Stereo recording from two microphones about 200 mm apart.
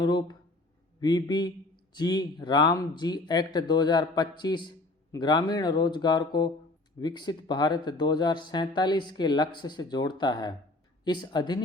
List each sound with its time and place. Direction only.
0.0 s speech: 20° left (ahead or behind)